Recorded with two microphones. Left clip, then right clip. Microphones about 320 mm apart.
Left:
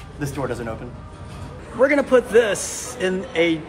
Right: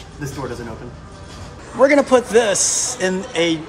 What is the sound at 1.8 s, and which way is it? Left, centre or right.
A man's voice, centre.